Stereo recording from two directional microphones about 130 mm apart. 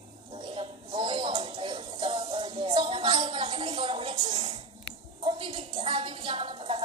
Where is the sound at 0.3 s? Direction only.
35° right (ahead or behind).